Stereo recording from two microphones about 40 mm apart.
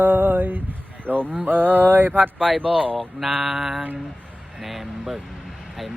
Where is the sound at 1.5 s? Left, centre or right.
Right.